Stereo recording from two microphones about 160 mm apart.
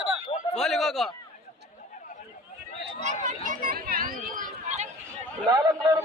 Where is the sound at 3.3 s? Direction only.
55° right (ahead or behind).